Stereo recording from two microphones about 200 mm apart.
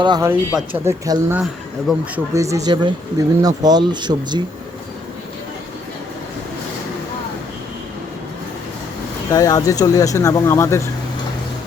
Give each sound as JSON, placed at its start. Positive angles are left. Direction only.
{"t": 0.0, "sound": "speech", "side_deg": -20}
{"t": 0.3, "sound": "speech", "side_deg": -10}
{"t": 1.9, "sound": "speech", "side_deg": 0}
{"t": 2.3, "sound": "speech", "side_deg": -15}
{"t": 9.3, "sound": "speech", "side_deg": 20}